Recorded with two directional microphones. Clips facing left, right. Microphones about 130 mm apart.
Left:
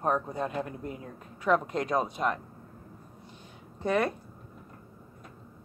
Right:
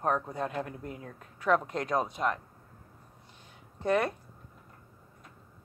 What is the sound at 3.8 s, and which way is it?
Speech, centre (ahead or behind).